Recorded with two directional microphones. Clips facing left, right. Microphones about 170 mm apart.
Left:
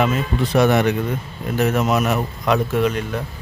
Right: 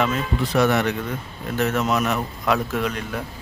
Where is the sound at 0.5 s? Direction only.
20° left (ahead or behind).